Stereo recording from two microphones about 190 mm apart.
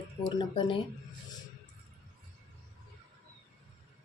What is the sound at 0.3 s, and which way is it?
Speech, 25° left (ahead or behind).